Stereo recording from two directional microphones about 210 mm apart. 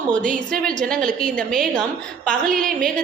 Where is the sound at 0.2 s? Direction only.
40° right (ahead or behind).